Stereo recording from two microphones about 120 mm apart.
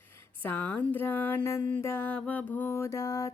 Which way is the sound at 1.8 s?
20° left (ahead or behind).